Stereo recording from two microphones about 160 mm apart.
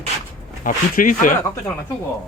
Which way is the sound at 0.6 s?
55° left (ahead or behind).